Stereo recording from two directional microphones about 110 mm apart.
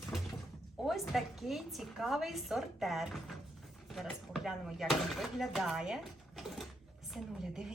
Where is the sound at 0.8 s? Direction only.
Centre (ahead or behind).